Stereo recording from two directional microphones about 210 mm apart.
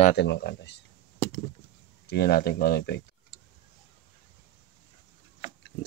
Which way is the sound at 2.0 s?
50° left (ahead or behind).